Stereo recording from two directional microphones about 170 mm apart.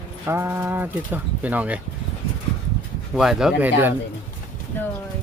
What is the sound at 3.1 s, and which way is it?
Speech, 5° right (ahead or behind).